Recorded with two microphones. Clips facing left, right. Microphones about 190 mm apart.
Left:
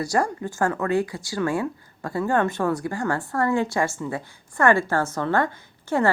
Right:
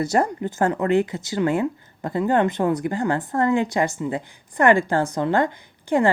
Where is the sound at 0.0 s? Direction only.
20° right (ahead or behind).